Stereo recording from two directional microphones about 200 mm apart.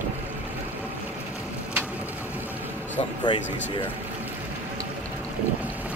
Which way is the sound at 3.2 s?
25° left (ahead or behind).